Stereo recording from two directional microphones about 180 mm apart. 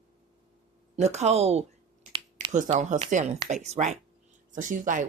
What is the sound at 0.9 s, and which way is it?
Speech, 40° right (ahead or behind).